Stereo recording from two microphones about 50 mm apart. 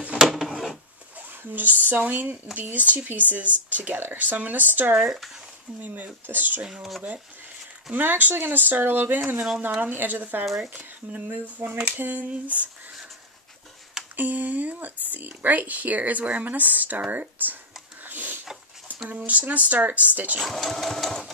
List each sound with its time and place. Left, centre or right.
0.2 s a sound: centre
1.5 s speech: right
4.9 s speech: centre
5.8 s speech: right
6.6 s speech: centre
7.9 s speech: right
10.4 s speech: centre
10.7 s speech: right
11.3 s speech: right
14.1 s speech: right
18.0 s a sound: right
19.0 s speech: right
20.3 s sewing machine: centre